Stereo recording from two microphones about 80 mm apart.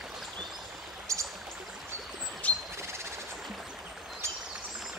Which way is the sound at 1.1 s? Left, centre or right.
Right.